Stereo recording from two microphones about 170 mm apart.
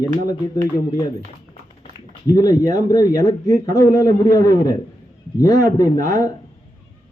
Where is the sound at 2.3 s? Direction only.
20° left (ahead or behind).